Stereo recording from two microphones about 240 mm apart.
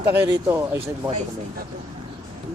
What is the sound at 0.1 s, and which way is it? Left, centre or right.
Speech, centre.